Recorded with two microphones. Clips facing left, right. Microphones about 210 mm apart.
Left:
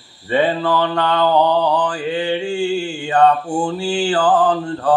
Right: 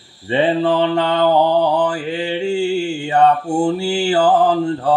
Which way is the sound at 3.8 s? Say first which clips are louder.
Right 2 dB; 25° right (ahead or behind).